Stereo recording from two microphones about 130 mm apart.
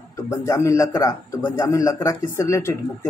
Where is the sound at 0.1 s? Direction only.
25° left (ahead or behind).